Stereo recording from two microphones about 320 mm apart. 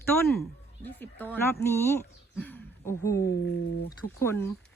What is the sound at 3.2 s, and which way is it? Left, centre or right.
Speech, left.